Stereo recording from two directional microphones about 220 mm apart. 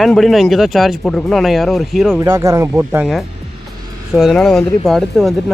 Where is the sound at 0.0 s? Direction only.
Centre (ahead or behind).